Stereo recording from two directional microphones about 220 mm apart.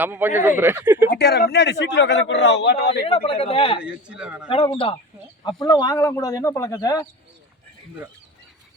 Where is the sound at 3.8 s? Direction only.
5° right (ahead or behind).